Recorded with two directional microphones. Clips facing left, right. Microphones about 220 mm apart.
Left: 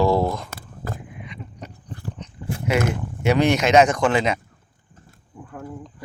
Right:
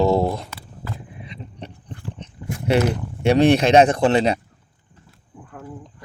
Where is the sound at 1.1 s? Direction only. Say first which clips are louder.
Right 1 dB; 30° right (ahead or behind).